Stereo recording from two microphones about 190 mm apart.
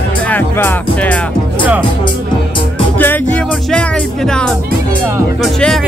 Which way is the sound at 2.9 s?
10° left (ahead or behind).